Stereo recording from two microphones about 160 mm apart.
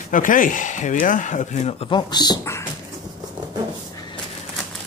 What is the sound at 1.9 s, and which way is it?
Speech, 25° left (ahead or behind).